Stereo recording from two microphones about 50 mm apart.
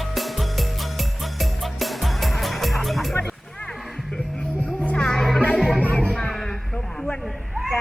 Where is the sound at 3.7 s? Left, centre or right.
Centre.